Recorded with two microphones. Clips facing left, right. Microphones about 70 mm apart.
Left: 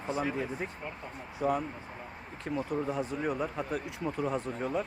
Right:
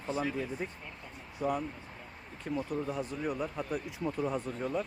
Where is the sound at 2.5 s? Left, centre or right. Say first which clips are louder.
Left 1 dB; left.